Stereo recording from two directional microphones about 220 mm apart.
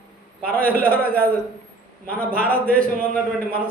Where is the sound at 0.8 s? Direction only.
5° left (ahead or behind).